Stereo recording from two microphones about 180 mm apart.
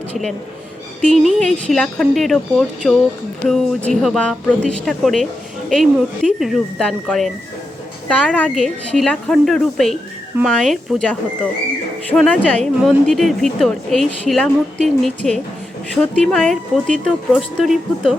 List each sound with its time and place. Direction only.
0.1 s a woman's voice: centre (ahead or behind)